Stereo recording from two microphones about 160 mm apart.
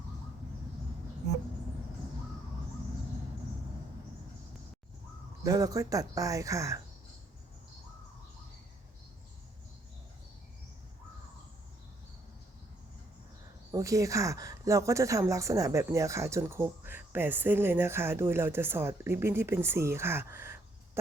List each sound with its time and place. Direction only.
5.4 s speech: 20° right (ahead or behind)
13.7 s a woman's voice: 20° right (ahead or behind)